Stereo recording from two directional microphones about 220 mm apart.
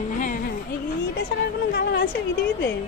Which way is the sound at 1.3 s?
55° left (ahead or behind).